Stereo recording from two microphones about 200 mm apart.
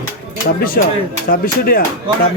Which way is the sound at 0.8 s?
50° left (ahead or behind).